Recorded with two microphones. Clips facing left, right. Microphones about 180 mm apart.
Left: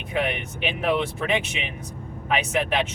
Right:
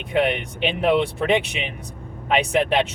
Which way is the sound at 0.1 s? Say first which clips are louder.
Right 5 dB; 30° right (ahead or behind).